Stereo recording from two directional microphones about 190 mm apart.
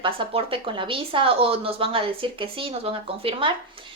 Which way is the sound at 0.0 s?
30° right (ahead or behind).